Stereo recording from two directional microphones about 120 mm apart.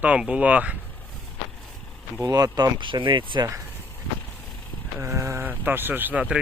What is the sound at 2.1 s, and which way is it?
Speech, 30° right (ahead or behind).